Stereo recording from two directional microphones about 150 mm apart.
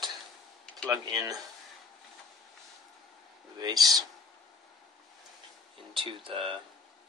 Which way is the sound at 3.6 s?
25° right (ahead or behind).